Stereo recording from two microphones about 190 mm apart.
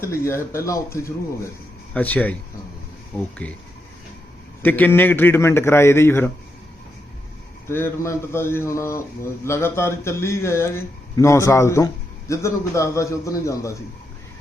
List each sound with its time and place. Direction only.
0.0 s a man's voice: 15° left (ahead or behind)
4.6 s a man's voice: 10° left (ahead or behind)
7.7 s a man's voice: 15° left (ahead or behind)